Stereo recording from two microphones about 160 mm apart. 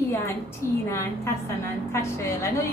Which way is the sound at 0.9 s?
15° left (ahead or behind).